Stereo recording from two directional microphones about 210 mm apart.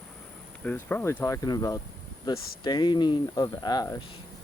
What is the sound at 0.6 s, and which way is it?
Speech, 10° left (ahead or behind).